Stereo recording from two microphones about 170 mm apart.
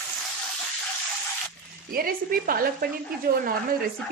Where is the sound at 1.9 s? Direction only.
60° right (ahead or behind).